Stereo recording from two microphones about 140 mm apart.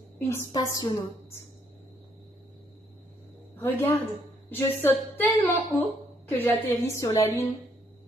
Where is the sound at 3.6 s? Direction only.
15° left (ahead or behind).